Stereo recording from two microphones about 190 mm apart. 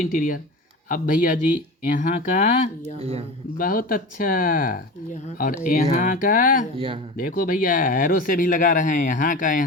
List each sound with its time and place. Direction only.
0.0 s speech: 45° left (ahead or behind)
3.0 s speech: 35° right (ahead or behind)
3.6 s speech: 50° left (ahead or behind)